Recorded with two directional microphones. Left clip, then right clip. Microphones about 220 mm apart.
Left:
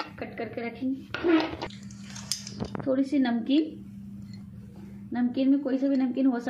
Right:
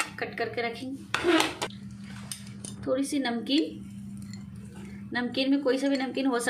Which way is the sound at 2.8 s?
15° left (ahead or behind).